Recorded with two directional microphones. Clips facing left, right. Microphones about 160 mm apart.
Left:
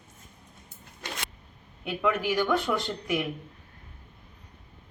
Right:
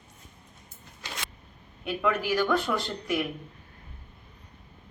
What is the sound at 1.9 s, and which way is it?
Speech, 20° left (ahead or behind).